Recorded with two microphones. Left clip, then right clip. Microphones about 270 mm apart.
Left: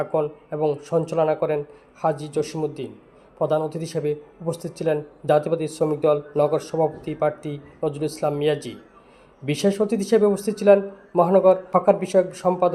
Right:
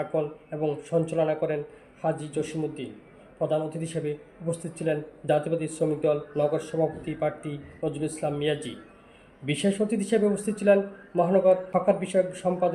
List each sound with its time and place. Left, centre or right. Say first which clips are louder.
0.1 s speech: left 5 dB; left